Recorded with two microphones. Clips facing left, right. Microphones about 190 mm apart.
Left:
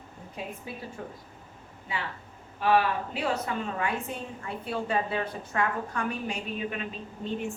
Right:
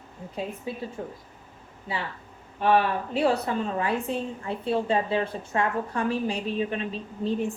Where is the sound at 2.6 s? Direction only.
40° right (ahead or behind).